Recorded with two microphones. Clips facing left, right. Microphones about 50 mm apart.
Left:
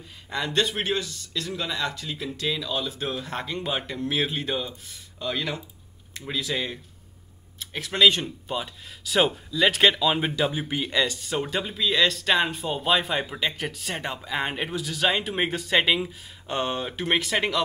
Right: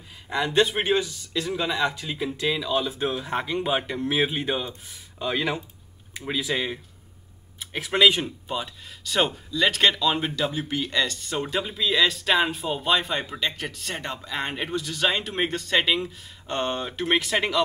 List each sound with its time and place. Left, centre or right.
0.3 s speech: centre
8.5 s speech: centre